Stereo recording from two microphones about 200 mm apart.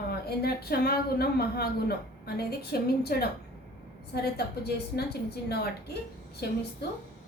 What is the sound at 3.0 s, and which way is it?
A woman's voice, 50° left (ahead or behind).